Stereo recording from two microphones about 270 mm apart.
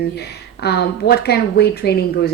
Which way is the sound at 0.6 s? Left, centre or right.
Left.